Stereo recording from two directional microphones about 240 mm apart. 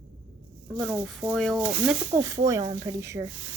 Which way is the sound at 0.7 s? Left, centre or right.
Centre.